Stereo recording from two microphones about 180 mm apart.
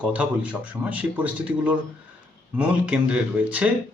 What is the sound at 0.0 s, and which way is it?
A man's voice, 5° right (ahead or behind).